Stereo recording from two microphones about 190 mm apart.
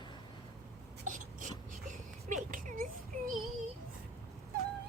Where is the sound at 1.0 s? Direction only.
45° right (ahead or behind).